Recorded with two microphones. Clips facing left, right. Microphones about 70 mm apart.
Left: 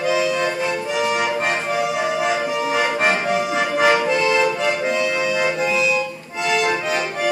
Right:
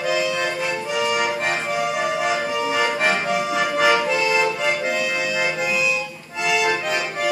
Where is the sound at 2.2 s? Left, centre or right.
Centre.